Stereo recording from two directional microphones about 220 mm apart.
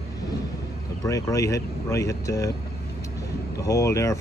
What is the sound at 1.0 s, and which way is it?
Speech, 15° left (ahead or behind).